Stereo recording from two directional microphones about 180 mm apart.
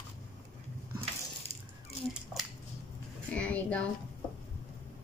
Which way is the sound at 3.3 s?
5° left (ahead or behind).